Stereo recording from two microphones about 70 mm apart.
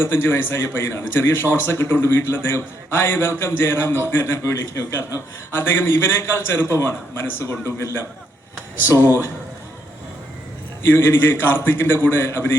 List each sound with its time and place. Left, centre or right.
0.0 s a man's voice: left
10.8 s a man's voice: left